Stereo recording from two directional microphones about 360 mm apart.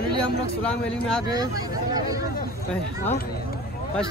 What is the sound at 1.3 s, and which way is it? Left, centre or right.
Speech, centre.